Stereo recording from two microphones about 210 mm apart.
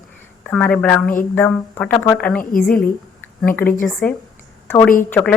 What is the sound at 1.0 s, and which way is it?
Speech, 40° left (ahead or behind).